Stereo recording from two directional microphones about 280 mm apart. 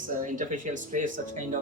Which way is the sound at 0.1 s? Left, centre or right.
Right.